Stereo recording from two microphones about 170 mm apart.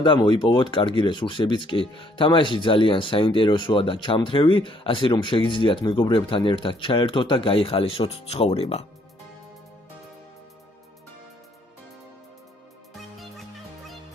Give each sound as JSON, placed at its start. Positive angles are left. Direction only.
{"t": 0.0, "sound": "speech", "side_deg": 25}